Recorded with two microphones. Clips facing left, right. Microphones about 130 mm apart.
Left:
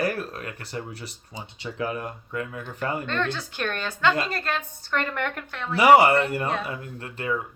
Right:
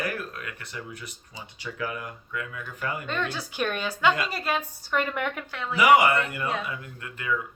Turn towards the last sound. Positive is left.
turn(degrees=35)  # may be behind; listen again after turning